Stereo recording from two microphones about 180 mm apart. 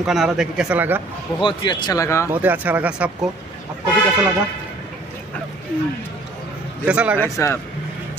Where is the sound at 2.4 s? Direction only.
10° right (ahead or behind).